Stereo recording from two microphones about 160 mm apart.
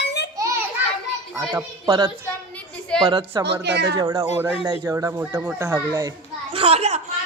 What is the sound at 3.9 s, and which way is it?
A child's voice, 20° right (ahead or behind).